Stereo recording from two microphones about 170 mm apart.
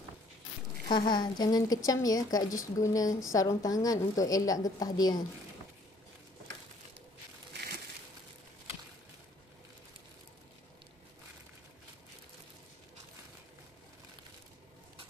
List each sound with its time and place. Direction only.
0.8 s a woman's voice: 25° left (ahead or behind)